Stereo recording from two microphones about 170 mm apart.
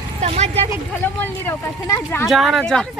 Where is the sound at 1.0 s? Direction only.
15° left (ahead or behind).